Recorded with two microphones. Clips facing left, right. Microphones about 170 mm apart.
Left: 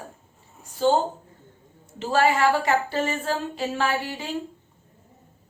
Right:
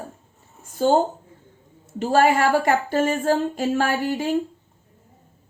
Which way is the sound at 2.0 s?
50° right (ahead or behind).